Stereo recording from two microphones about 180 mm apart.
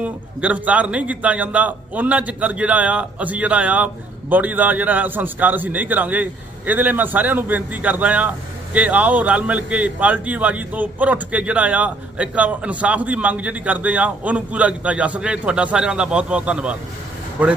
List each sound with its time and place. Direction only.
0.0 s a man's voice: 10° right (ahead or behind)